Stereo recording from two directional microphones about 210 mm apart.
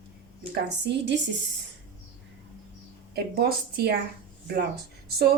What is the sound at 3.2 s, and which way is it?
Speech, 50° right (ahead or behind).